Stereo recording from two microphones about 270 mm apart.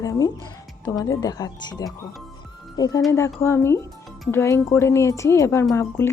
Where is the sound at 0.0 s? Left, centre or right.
Centre.